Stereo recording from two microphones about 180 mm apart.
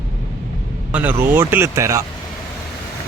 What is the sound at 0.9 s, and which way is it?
Speech, 10° right (ahead or behind).